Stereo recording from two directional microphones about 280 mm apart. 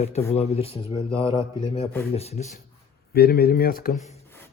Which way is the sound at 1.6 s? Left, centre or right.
Left.